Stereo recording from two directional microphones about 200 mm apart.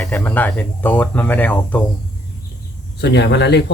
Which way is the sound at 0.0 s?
10° left (ahead or behind).